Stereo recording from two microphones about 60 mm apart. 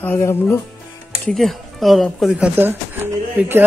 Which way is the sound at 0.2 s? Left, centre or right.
Left.